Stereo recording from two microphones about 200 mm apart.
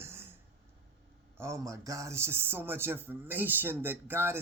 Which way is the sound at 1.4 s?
15° right (ahead or behind).